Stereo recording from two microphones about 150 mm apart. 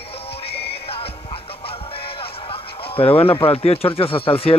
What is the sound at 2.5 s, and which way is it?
Speech, 40° left (ahead or behind).